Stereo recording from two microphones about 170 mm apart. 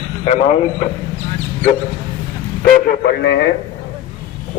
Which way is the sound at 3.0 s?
75° left (ahead or behind).